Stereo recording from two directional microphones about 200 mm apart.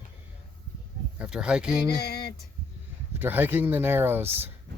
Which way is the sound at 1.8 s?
55° left (ahead or behind).